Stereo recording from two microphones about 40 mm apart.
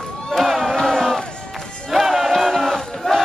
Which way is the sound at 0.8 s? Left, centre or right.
Centre.